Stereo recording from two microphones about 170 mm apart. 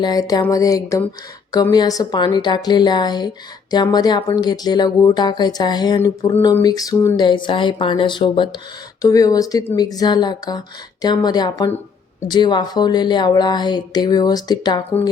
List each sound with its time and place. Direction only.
0.0 s speech: 20° left (ahead or behind)